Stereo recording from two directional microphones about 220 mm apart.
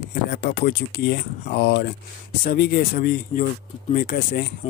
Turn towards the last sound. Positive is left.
turn(degrees=45)  # may be behind; listen again after turning